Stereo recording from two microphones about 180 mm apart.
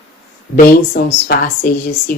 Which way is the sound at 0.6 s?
55° left (ahead or behind).